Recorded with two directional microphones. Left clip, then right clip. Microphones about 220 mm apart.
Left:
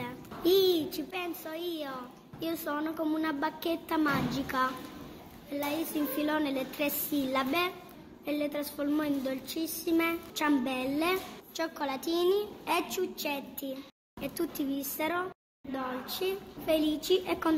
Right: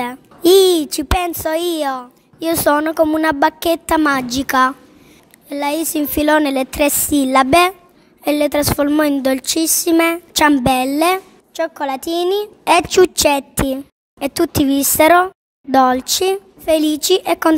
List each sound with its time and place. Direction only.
0.0 s a child's voice: 55° right (ahead or behind)
11.5 s a woman's voice: 40° right (ahead or behind)